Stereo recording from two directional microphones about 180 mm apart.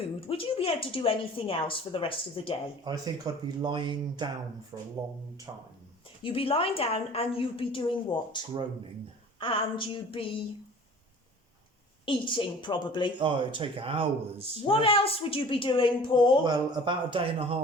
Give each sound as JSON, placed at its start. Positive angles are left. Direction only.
{"t": 0.3, "sound": "a woman's voice", "side_deg": 30}
{"t": 2.8, "sound": "speech", "side_deg": -20}
{"t": 6.2, "sound": "a woman's voice", "side_deg": 30}
{"t": 9.4, "sound": "a woman's voice", "side_deg": 30}
{"t": 12.0, "sound": "a woman's voice", "side_deg": 30}
{"t": 13.1, "sound": "speech", "side_deg": -25}
{"t": 14.6, "sound": "a woman's voice", "side_deg": 30}
{"t": 16.4, "sound": "speech", "side_deg": -25}